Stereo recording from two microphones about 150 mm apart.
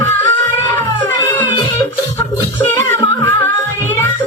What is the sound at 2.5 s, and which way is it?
Music, 15° left (ahead or behind).